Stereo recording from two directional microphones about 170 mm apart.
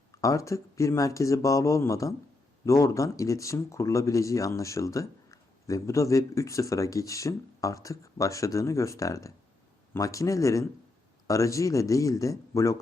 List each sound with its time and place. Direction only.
0.1 s speech: 20° left (ahead or behind)